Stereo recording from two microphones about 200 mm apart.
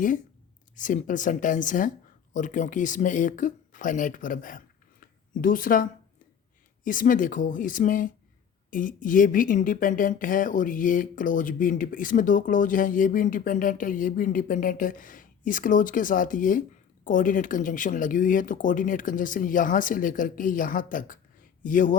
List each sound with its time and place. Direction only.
0.8 s a woman's voice: 40° left (ahead or behind)